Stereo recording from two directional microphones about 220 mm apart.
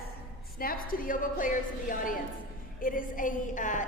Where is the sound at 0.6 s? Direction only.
40° left (ahead or behind).